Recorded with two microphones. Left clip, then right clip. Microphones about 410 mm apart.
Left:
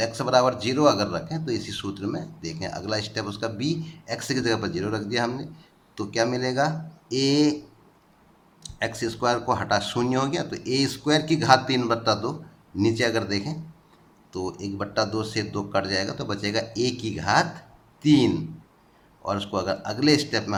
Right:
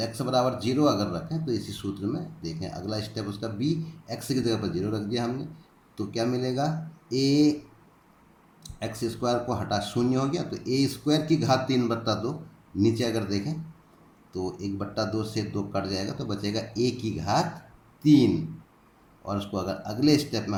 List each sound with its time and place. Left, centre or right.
0.0 s speech: centre
8.6 s a man's voice: centre